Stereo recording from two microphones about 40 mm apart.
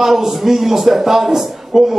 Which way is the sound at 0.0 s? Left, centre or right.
Centre.